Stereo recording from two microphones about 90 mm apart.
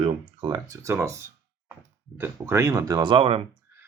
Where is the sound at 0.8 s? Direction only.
30° right (ahead or behind).